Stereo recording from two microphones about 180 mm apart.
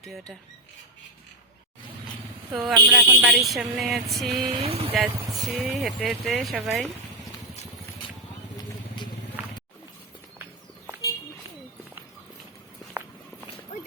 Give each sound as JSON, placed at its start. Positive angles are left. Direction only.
{"t": 0.0, "sound": "speech", "side_deg": 0}
{"t": 2.5, "sound": "speech", "side_deg": 0}
{"t": 4.6, "sound": "speech", "side_deg": -35}
{"t": 4.9, "sound": "speech", "side_deg": 0}
{"t": 13.7, "sound": "a sound", "side_deg": 40}